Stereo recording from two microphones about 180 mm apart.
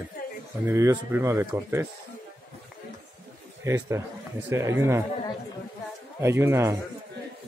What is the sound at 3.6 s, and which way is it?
A man's voice, 15° right (ahead or behind).